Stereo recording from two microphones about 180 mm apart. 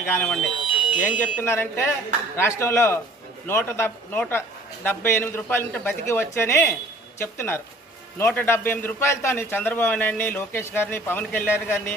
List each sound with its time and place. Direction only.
0.1 s speech: 5° left (ahead or behind)
0.6 s alarm: 5° right (ahead or behind)
1.4 s a man's voice: 10° left (ahead or behind)